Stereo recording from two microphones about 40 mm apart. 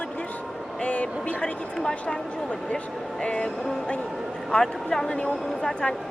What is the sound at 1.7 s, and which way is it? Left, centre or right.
Speech, centre.